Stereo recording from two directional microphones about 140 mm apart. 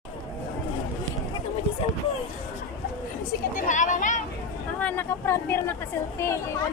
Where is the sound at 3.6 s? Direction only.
65° left (ahead or behind).